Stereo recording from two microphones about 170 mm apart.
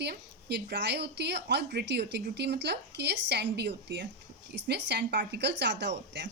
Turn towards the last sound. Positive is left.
turn(degrees=-90)